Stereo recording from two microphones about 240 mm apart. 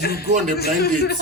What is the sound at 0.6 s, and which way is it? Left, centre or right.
Speech, left.